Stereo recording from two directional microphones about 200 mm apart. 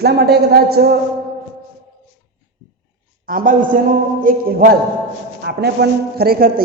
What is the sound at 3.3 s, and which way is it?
A man's voice, 45° right (ahead or behind).